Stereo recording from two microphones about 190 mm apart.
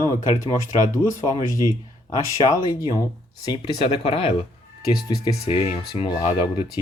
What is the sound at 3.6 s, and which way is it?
Speech, 30° left (ahead or behind).